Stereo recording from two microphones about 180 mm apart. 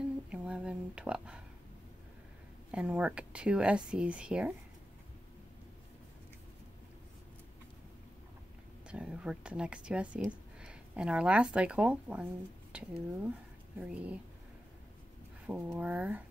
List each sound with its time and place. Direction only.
0.0 s a sound: 5° right (ahead or behind)
2.7 s speech: 5° right (ahead or behind)
8.8 s speech: 5° right (ahead or behind)
15.4 s speech: 10° right (ahead or behind)